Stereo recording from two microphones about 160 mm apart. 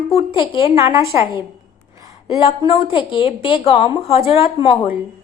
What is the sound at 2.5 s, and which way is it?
A woman's voice, 35° left (ahead or behind).